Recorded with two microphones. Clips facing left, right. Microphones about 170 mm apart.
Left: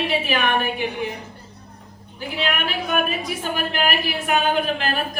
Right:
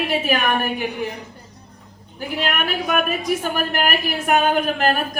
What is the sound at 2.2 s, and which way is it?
A man's voice, 45° right (ahead or behind).